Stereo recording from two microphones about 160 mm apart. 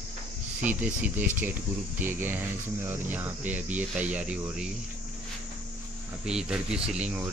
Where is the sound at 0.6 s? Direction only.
10° right (ahead or behind).